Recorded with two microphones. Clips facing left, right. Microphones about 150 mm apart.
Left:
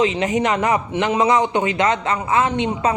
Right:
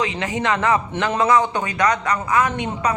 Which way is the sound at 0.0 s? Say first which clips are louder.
Left 5 dB; 20° left (ahead or behind).